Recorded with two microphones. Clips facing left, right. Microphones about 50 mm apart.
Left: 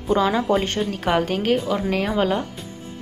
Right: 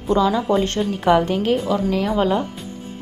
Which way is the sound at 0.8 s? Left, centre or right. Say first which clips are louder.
Right 2 dB; centre.